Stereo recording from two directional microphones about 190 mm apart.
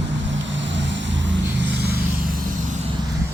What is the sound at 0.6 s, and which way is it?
Vehicle, 70° right (ahead or behind).